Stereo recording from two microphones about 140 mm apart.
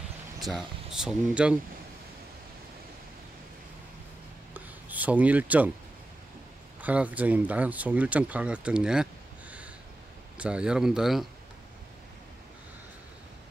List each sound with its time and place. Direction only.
0.4 s speech: centre (ahead or behind)
4.6 s a sound: 10° right (ahead or behind)
6.8 s speech: 10° right (ahead or behind)